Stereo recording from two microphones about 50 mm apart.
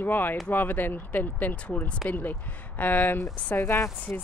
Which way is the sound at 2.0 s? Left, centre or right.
Left.